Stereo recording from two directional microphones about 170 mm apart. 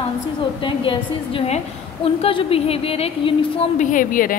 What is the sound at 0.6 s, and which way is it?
A woman's voice, 30° left (ahead or behind).